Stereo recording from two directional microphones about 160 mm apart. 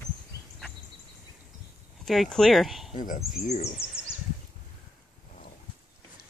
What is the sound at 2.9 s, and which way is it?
Speech, 55° left (ahead or behind).